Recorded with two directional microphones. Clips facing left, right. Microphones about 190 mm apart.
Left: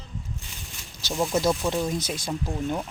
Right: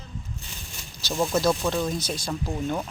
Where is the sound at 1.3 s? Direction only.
15° left (ahead or behind).